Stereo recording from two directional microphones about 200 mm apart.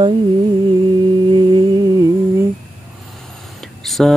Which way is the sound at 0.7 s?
25° right (ahead or behind).